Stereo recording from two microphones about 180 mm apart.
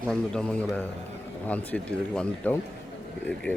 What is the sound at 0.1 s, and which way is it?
Speech, 5° left (ahead or behind).